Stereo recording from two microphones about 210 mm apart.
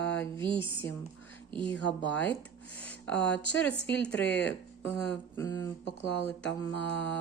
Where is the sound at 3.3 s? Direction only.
60° left (ahead or behind).